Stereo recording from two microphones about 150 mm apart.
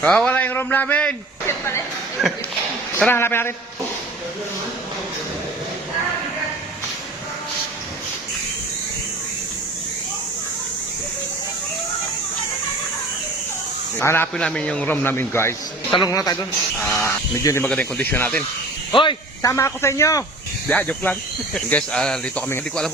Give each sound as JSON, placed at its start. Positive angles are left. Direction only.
{"t": 0.0, "sound": "speech", "side_deg": 5}
{"t": 2.2, "sound": "speech", "side_deg": 0}
{"t": 3.1, "sound": "speech", "side_deg": 15}
{"t": 14.0, "sound": "speech", "side_deg": 15}
{"t": 17.7, "sound": "speech", "side_deg": 10}
{"t": 18.9, "sound": "speech", "side_deg": 30}
{"t": 20.7, "sound": "speech", "side_deg": 10}